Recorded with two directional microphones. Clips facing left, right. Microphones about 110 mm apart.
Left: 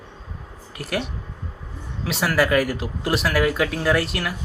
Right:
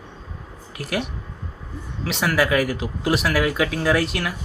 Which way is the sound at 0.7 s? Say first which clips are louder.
Right 1 dB; centre (ahead or behind).